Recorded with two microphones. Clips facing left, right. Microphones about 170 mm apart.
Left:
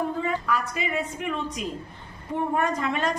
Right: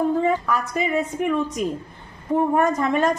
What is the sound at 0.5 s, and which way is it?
A woman's voice, 45° right (ahead or behind).